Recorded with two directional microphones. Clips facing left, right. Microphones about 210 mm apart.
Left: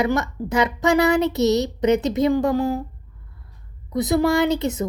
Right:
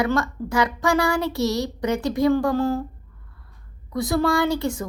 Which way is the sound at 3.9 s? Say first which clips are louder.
Left 3 dB; 20° left (ahead or behind).